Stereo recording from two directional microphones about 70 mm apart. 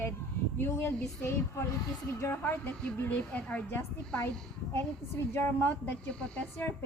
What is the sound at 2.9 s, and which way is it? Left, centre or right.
Speech, left.